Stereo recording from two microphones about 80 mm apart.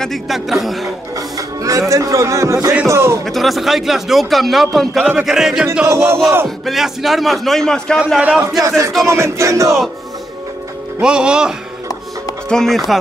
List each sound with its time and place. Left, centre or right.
0.0 s a man's voice: centre
0.8 s speech: right
3.3 s a man's voice: centre
5.9 s speech: right
6.4 s a man's voice: centre
8.2 s speech: centre
8.6 s speech: right
11.0 s speech: centre
12.4 s a man's voice: centre